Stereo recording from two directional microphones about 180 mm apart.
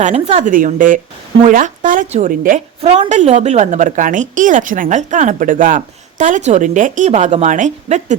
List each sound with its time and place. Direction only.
0.0 s a woman's voice: 35° right (ahead or behind)
0.4 s a woman's voice: 45° right (ahead or behind)